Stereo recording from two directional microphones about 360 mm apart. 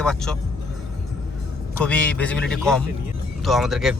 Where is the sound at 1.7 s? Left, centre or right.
Centre.